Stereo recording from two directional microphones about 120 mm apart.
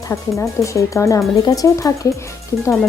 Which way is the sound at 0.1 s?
25° left (ahead or behind).